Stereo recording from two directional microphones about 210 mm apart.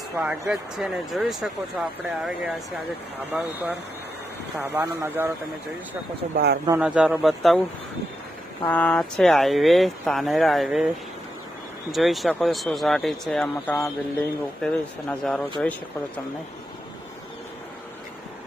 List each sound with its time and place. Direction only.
0.2 s speech: 5° right (ahead or behind)
4.7 s speech: 10° right (ahead or behind)
6.3 s speech: 50° right (ahead or behind)
6.7 s speech: 5° right (ahead or behind)
8.6 s speech: 5° left (ahead or behind)
11.9 s speech: centre (ahead or behind)